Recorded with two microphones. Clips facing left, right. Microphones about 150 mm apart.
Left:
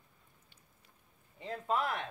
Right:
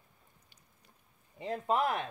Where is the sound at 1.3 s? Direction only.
20° right (ahead or behind).